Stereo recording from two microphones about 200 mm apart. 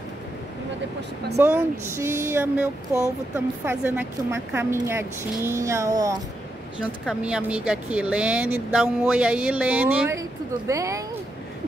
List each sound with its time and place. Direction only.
1.3 s speech: 10° right (ahead or behind)
6.8 s speech: 5° right (ahead or behind)